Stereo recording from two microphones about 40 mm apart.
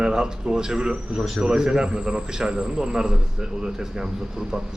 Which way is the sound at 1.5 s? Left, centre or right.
Centre.